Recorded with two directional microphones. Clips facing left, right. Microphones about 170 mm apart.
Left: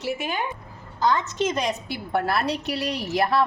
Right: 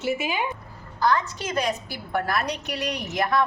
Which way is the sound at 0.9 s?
20° left (ahead or behind).